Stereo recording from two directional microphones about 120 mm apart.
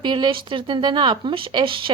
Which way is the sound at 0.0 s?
40° right (ahead or behind).